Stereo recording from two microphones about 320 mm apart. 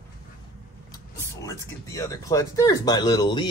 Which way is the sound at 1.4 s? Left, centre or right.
Centre.